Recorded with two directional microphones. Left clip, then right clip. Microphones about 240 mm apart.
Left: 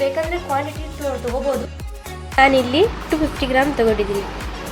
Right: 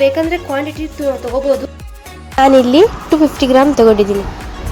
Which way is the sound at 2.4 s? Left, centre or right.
Right.